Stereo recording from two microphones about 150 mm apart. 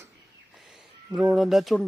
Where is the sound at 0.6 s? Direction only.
Centre (ahead or behind).